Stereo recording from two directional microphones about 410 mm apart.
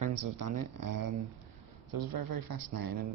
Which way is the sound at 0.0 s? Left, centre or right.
Right.